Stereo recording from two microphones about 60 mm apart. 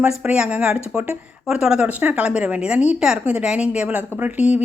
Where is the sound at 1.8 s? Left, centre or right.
Right.